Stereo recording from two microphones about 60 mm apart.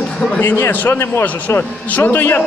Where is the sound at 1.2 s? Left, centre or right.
Left.